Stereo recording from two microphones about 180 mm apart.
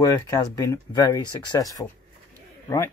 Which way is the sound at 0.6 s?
20° left (ahead or behind).